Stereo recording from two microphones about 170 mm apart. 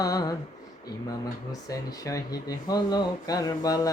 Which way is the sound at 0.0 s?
20° left (ahead or behind).